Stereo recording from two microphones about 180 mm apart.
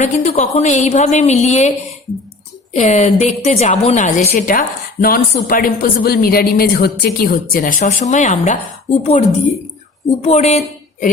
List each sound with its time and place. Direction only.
0.0 s a woman's voice: 40° left (ahead or behind)
2.7 s a woman's voice: 40° left (ahead or behind)